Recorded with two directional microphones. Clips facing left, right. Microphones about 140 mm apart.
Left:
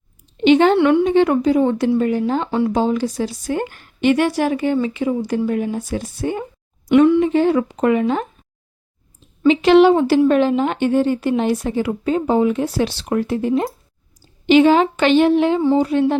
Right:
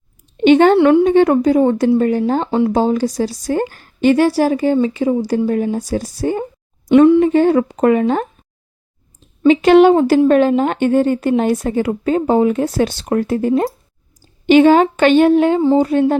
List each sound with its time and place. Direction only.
0.4 s a woman's voice: 50° right (ahead or behind)
0.8 s a woman's voice: 35° right (ahead or behind)
1.0 s a woman's voice: 45° right (ahead or behind); by 7.2 s 25° right (ahead or behind)
7.2 s a woman's voice: 45° right (ahead or behind)
9.5 s a woman's voice: 45° right (ahead or behind)